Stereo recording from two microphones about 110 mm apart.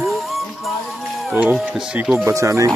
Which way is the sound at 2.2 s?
25° right (ahead or behind).